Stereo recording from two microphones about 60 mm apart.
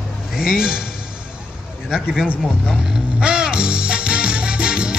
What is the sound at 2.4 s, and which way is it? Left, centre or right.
Speech, centre.